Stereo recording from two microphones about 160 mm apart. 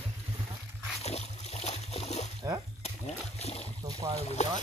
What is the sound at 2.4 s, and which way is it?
Speech, 20° right (ahead or behind).